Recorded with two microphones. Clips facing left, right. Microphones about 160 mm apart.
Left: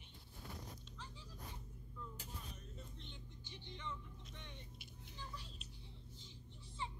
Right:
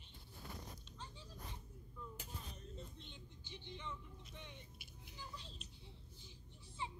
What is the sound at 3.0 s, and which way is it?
Music, 15° right (ahead or behind).